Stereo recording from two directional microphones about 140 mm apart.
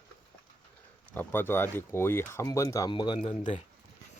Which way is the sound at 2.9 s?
35° left (ahead or behind).